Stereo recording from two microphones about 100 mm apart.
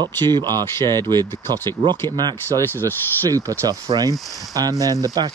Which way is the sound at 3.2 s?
35° right (ahead or behind).